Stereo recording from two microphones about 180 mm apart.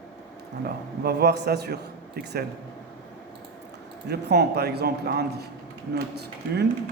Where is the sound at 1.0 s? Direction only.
70° right (ahead or behind).